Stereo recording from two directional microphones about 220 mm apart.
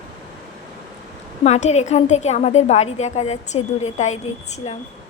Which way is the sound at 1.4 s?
30° left (ahead or behind).